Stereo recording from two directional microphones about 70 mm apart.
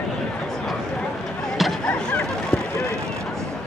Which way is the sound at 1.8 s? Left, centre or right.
Left.